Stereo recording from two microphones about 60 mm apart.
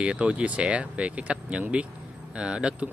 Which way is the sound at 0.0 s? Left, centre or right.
Centre.